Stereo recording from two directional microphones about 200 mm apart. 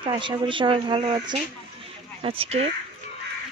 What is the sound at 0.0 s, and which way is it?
Speech, 25° right (ahead or behind).